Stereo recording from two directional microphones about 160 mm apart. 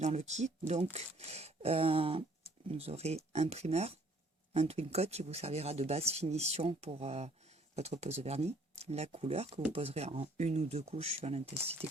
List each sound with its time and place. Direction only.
0.0 s speech: 45° right (ahead or behind)